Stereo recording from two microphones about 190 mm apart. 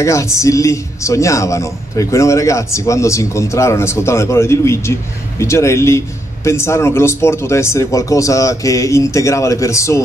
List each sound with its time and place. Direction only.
0.0 s speech: 15° left (ahead or behind)